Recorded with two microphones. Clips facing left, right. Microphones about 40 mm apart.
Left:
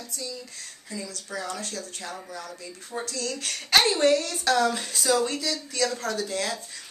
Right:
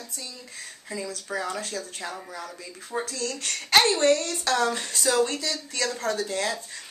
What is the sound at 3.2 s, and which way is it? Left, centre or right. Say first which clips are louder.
Speech: even; centre.